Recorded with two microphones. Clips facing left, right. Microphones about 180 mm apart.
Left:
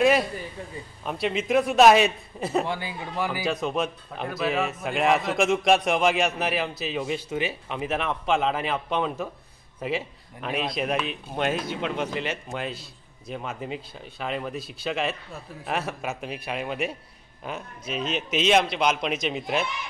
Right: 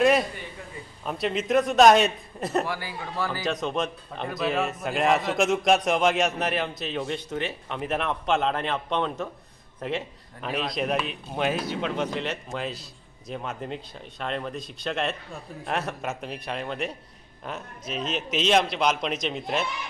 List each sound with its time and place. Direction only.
0.0 s speech: centre (ahead or behind)
2.6 s speech: 20° left (ahead or behind)
3.6 s speech: 5° left (ahead or behind)